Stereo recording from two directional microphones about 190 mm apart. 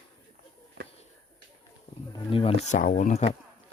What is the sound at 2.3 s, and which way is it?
Speech, 30° left (ahead or behind).